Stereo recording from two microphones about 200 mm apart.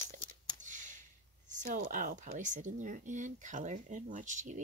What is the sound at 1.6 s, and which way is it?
Speech, 40° right (ahead or behind).